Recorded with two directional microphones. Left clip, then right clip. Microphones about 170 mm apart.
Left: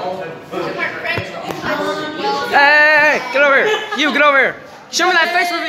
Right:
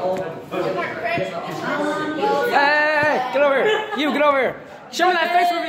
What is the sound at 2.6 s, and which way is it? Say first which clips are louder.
Music: left 9 dB; 5° left (ahead or behind).